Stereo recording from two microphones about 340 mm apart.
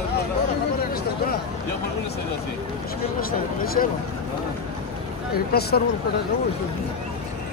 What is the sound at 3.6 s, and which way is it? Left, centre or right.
Speech, left.